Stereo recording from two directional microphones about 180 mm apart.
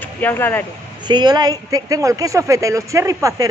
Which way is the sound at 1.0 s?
25° right (ahead or behind).